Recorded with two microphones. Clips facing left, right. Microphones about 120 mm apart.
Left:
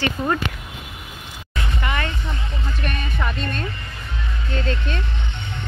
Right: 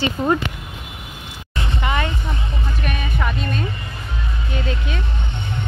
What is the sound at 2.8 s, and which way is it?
Music, 5° right (ahead or behind).